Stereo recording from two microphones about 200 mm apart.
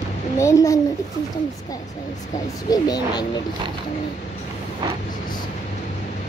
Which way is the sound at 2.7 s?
20° left (ahead or behind).